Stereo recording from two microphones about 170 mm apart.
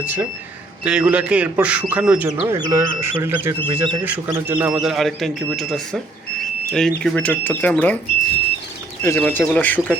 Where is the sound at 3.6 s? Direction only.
25° right (ahead or behind).